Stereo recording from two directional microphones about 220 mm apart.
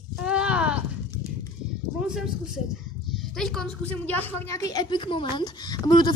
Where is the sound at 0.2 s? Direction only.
5° right (ahead or behind).